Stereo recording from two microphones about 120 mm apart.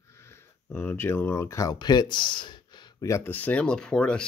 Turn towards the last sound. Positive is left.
turn(degrees=5)  # may be behind; listen again after turning